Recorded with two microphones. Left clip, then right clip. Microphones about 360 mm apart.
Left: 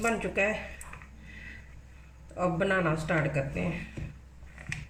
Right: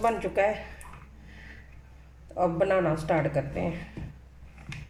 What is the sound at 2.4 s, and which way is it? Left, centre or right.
Speech, centre.